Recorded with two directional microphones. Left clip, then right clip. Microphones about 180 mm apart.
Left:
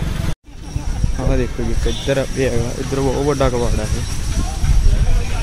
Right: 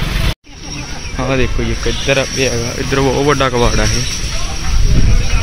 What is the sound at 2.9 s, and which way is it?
Speech, centre (ahead or behind).